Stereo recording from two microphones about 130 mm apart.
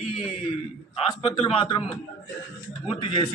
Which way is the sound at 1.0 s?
40° left (ahead or behind).